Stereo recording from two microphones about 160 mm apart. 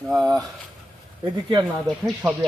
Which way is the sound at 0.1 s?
Centre (ahead or behind).